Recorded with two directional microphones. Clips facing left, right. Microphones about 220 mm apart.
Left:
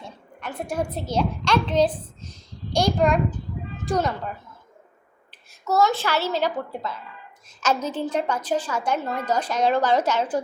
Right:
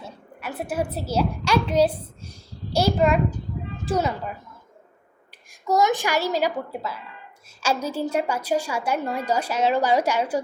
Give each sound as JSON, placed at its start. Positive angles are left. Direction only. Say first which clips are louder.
{"t": 0.0, "sound": "a woman's voice", "louder": "right 1 dB", "side_deg": -5}
{"t": 5.6, "sound": "a woman's voice", "louder": "even", "side_deg": -15}